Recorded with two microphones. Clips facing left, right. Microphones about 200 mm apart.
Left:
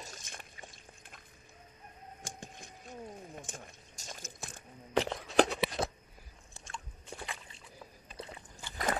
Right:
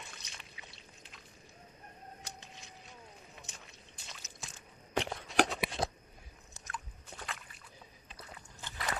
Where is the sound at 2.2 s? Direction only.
50° left (ahead or behind).